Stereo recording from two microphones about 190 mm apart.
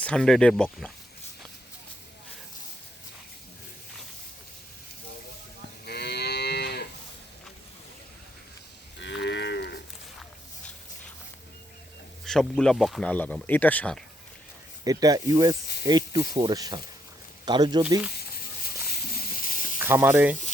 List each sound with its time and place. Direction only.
0.0 s speech: 5° left (ahead or behind)
5.8 s moo: 60° left (ahead or behind)
9.0 s moo: 70° left (ahead or behind)
12.2 s speech: 5° left (ahead or behind)
14.8 s speech: 20° right (ahead or behind)
18.9 s snake: 50° left (ahead or behind)
19.8 s speech: 10° right (ahead or behind)